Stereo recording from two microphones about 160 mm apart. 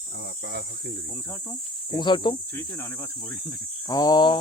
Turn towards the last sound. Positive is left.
turn(degrees=25)  # may be behind; listen again after turning